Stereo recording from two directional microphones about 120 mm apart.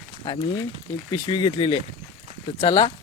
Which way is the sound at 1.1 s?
35° left (ahead or behind).